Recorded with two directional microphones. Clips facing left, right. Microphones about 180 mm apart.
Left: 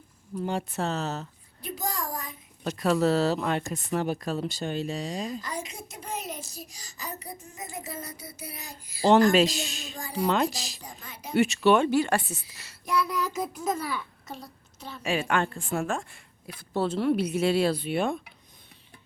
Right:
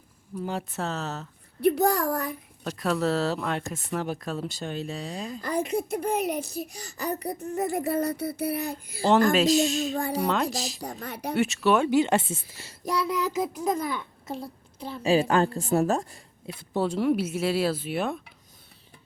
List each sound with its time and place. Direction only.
0.4 s speech: centre (ahead or behind)
1.6 s a child's voice: 65° right (ahead or behind)
2.6 s speech: centre (ahead or behind)
5.4 s a child's voice: 55° right (ahead or behind)
9.3 s speech: centre (ahead or behind)
11.0 s a child's voice: 65° right (ahead or behind)
11.3 s speech: centre (ahead or behind)
11.9 s a child's voice: 20° right (ahead or behind); by 16.0 s 35° right (ahead or behind)
16.6 s speech: 15° right (ahead or behind)